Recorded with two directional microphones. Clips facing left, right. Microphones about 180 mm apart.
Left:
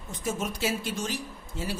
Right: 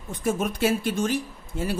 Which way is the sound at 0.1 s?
55° right (ahead or behind).